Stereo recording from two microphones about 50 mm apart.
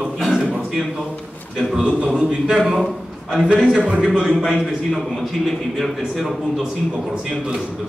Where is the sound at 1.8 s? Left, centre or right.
Right.